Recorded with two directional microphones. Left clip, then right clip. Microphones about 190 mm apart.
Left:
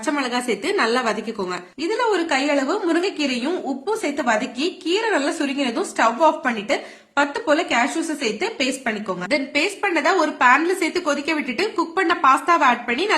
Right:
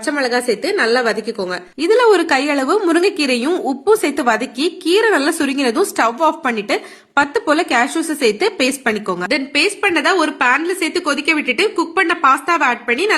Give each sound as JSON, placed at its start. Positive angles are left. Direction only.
{"t": 0.0, "sound": "a woman's voice", "side_deg": -20}
{"t": 1.8, "sound": "a woman's voice", "side_deg": -30}
{"t": 9.3, "sound": "a woman's voice", "side_deg": -15}